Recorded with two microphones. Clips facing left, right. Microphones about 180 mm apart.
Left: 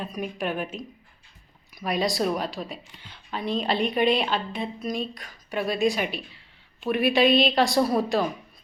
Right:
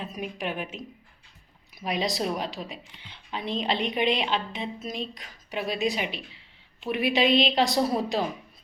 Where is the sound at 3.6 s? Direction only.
20° right (ahead or behind).